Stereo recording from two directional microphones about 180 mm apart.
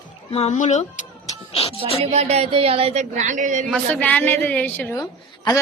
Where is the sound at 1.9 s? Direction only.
35° right (ahead or behind).